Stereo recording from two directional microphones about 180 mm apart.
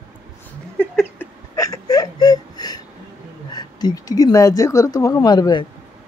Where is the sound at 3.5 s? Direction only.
20° left (ahead or behind).